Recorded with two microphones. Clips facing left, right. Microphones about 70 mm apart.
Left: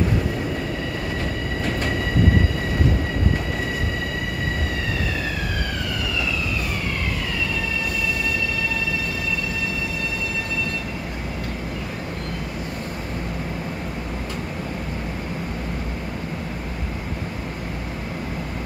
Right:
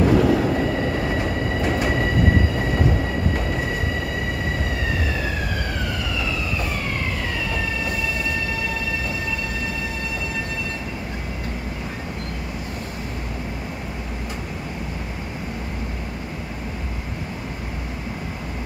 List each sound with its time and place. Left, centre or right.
0.0 s train: right
1.6 s train: centre